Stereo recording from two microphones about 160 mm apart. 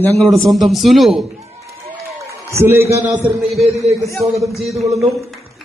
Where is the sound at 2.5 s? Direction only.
15° right (ahead or behind).